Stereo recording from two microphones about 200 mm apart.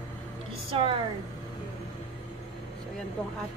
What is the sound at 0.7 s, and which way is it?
Speech, 30° right (ahead or behind).